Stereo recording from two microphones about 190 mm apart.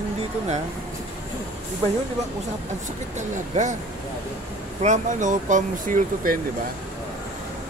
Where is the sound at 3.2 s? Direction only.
40° right (ahead or behind).